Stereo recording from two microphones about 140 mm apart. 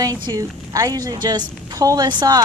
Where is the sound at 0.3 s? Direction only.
25° right (ahead or behind).